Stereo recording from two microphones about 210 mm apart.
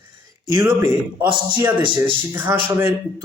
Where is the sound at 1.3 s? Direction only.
20° right (ahead or behind).